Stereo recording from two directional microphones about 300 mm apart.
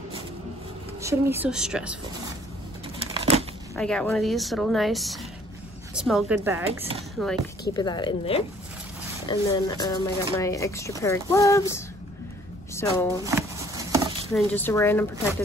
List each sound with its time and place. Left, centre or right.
1.0 s speech: centre
3.0 s scissors: centre
3.7 s speech: centre
7.7 s speech: centre
12.8 s speech: centre
13.2 s a sound: centre
14.3 s speech: centre